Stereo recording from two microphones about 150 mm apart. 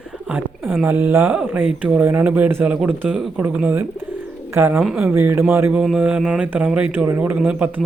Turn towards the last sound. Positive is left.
turn(degrees=-10)  # may be behind; listen again after turning